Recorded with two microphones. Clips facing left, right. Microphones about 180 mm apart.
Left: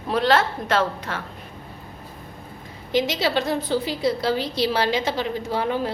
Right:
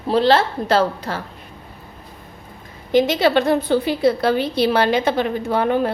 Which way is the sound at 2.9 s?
55° right (ahead or behind).